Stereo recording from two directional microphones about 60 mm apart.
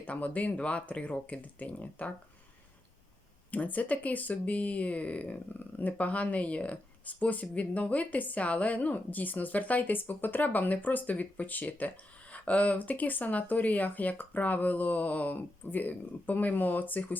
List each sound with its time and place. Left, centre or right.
0.0 s speech: left
3.5 s speech: left